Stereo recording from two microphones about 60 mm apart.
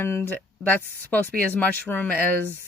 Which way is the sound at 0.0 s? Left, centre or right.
Left.